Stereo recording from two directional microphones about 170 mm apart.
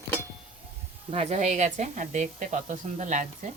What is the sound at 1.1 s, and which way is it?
Speech, 40° right (ahead or behind).